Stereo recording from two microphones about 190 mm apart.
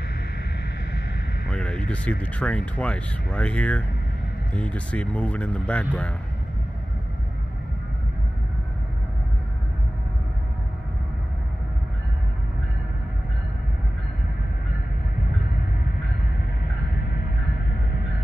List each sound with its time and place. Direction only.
1.5 s speech: 5° left (ahead or behind)